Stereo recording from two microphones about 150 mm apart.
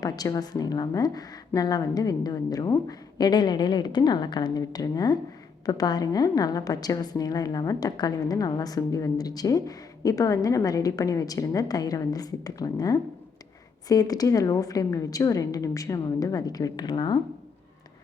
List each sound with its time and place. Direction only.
0.0 s a woman's voice: 25° left (ahead or behind)